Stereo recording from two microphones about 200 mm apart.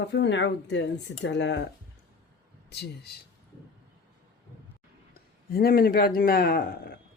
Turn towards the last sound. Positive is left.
turn(degrees=50)  # may be behind; listen again after turning